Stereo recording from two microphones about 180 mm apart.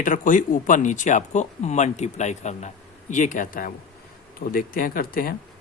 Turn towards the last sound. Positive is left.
turn(degrees=55)  # may be behind; listen again after turning